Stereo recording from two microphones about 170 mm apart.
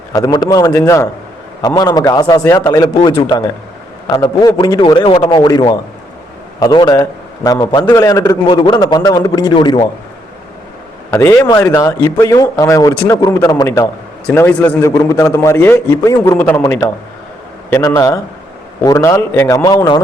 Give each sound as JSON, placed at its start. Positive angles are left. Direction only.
{"t": 0.1, "sound": "a man's voice", "side_deg": 20}
{"t": 11.1, "sound": "a man's voice", "side_deg": 15}